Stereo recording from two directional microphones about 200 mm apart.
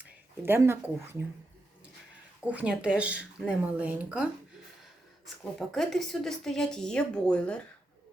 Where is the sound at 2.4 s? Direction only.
5° right (ahead or behind).